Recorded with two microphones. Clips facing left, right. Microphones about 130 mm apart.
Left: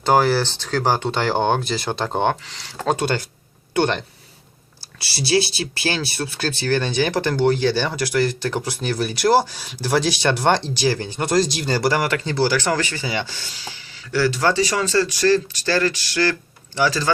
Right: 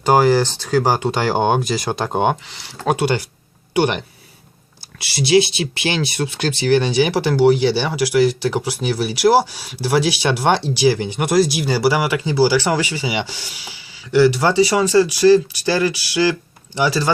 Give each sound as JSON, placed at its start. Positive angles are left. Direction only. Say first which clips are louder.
{"t": 0.0, "sound": "speech", "louder": "right 3 dB", "side_deg": -15}